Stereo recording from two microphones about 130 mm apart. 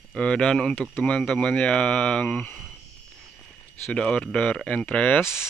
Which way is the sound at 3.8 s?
5° left (ahead or behind).